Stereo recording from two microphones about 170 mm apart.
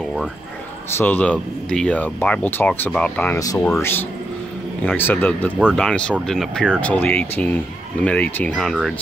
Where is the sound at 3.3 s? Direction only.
20° left (ahead or behind).